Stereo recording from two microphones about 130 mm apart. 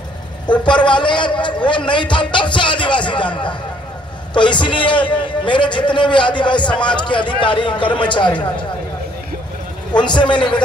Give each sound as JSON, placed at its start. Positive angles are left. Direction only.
{"t": 0.5, "sound": "a man's voice", "side_deg": 35}
{"t": 9.9, "sound": "a man's voice", "side_deg": 35}